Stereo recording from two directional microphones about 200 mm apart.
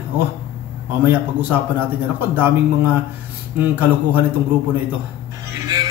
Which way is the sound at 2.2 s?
10° right (ahead or behind).